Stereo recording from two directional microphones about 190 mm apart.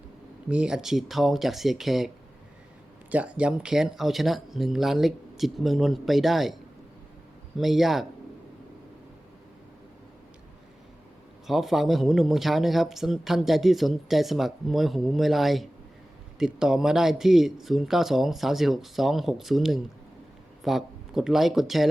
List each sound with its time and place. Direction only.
0.4 s speech: 5° right (ahead or behind)
3.1 s speech: 5° right (ahead or behind)
11.4 s speech: centre (ahead or behind)